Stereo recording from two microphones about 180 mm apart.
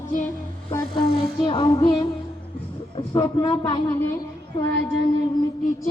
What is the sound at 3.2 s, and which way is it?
Speech, 20° left (ahead or behind).